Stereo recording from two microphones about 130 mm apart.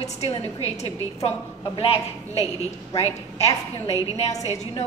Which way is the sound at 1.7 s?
45° left (ahead or behind).